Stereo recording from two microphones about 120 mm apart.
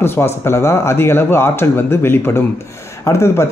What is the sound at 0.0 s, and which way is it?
Speech, 20° left (ahead or behind).